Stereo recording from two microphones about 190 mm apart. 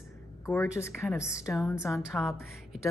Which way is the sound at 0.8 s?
15° left (ahead or behind).